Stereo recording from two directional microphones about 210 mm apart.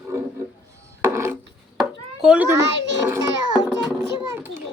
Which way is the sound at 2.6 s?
55° right (ahead or behind).